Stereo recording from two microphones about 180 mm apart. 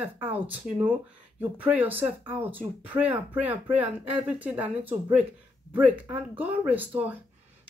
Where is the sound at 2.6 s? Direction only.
10° right (ahead or behind).